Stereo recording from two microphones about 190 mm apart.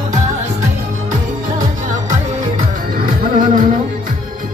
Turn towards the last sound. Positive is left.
turn(degrees=-45)  # may be behind; listen again after turning